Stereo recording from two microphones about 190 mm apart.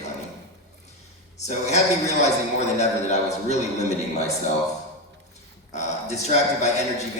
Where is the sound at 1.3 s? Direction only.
35° left (ahead or behind).